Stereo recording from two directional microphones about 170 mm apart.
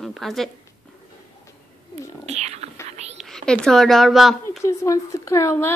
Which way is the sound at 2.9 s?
40° right (ahead or behind).